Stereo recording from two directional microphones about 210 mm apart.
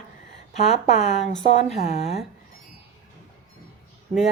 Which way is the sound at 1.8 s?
30° left (ahead or behind).